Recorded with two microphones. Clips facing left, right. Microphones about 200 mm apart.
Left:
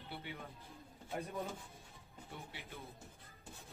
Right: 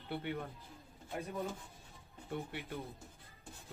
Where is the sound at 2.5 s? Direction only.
55° right (ahead or behind).